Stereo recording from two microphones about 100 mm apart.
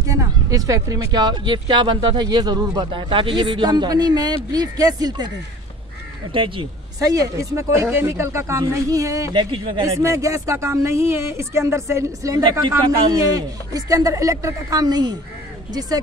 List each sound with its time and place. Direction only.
0.1 s speech: 35° right (ahead or behind)
6.3 s speech: 60° right (ahead or behind)
7.0 s speech: 40° right (ahead or behind)
9.3 s speech: 55° right (ahead or behind)
9.9 s speech: 30° right (ahead or behind)